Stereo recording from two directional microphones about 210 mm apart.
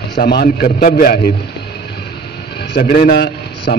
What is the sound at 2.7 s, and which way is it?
A man's voice, 45° left (ahead or behind).